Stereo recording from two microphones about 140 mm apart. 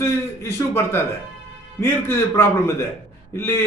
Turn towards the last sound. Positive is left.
turn(degrees=20)  # may be behind; listen again after turning